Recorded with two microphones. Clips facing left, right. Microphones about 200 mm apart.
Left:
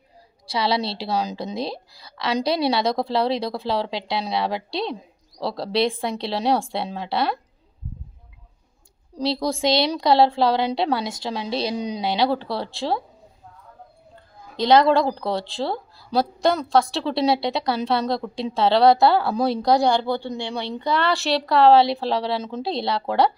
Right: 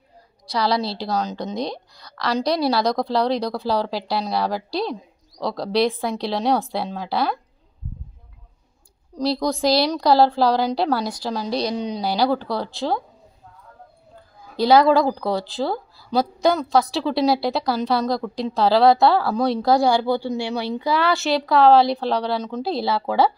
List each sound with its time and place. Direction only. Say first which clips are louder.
0.9 s a woman's voice: right 1 dB; 5° left (ahead or behind)
9.1 s a woman's voice: right 2 dB; centre (ahead or behind)
12.1 s a woman's voice: right 2 dB; centre (ahead or behind)
14.5 s a woman's voice: right 1 dB; 5° right (ahead or behind)